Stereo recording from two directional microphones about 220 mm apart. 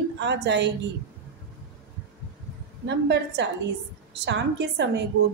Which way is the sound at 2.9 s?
50° right (ahead or behind).